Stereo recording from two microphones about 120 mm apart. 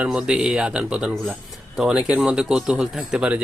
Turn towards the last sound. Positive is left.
turn(degrees=-10)  # may be behind; listen again after turning